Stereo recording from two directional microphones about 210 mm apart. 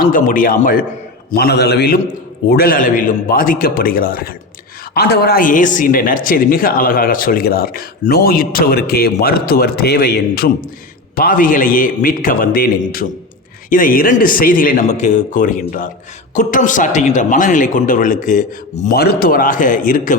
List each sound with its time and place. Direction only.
0.0 s a man's voice: 40° left (ahead or behind)